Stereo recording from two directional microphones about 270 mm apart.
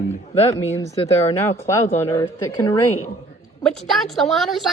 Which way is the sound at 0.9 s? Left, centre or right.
Left.